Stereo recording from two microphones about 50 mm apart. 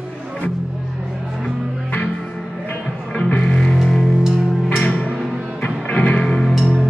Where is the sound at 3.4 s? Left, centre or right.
Centre.